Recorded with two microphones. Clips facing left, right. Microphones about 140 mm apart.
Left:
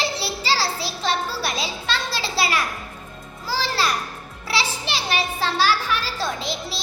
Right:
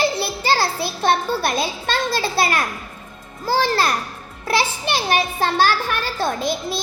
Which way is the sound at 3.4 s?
50° right (ahead or behind).